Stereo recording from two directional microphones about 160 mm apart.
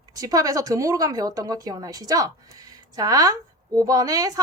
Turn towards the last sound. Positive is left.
turn(degrees=-20)  # may be behind; listen again after turning